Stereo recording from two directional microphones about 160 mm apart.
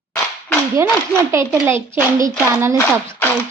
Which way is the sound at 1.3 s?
15° right (ahead or behind).